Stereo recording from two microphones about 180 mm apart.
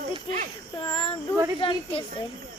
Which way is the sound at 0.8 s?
30° left (ahead or behind).